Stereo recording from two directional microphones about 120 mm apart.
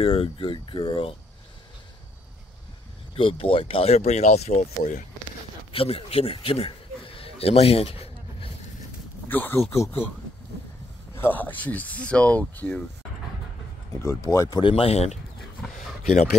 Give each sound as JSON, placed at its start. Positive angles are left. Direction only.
{"t": 0.0, "sound": "speech", "side_deg": 50}
{"t": 3.2, "sound": "speech", "side_deg": 50}
{"t": 5.7, "sound": "a sound", "side_deg": 50}
{"t": 9.3, "sound": "speech", "side_deg": 15}
{"t": 11.1, "sound": "speech", "side_deg": 15}
{"t": 14.0, "sound": "speech", "side_deg": 25}
{"t": 14.5, "sound": "speech", "side_deg": 45}
{"t": 15.6, "sound": "a sound", "side_deg": 0}